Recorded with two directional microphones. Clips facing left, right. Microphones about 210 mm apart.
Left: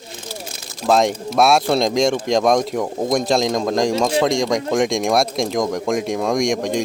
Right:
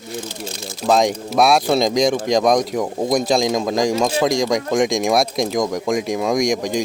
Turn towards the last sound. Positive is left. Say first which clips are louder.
# even
turn(degrees=0)  # may be behind; listen again after turning